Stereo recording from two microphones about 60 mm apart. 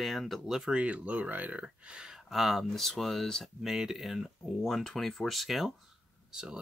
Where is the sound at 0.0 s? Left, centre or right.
Centre.